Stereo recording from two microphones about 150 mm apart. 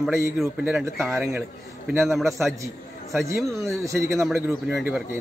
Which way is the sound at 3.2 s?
20° right (ahead or behind).